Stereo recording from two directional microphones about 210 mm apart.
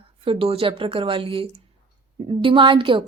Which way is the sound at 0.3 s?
25° right (ahead or behind).